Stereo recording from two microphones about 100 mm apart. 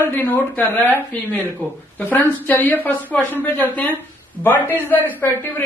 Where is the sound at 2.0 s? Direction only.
20° left (ahead or behind).